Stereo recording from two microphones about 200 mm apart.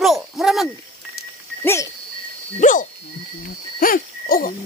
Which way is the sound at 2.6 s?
40° left (ahead or behind).